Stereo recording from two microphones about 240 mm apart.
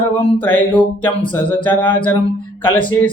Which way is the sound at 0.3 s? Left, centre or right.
Centre.